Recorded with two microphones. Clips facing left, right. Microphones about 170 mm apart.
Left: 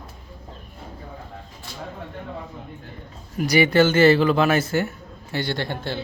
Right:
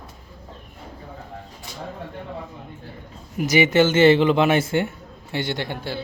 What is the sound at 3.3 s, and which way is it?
Speech, 20° right (ahead or behind).